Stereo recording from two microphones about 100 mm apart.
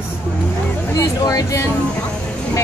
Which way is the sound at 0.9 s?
35° left (ahead or behind).